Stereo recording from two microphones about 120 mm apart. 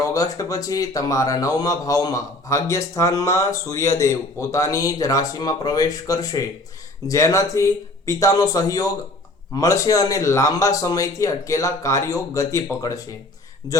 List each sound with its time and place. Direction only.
0.0 s a man's voice: 30° left (ahead or behind)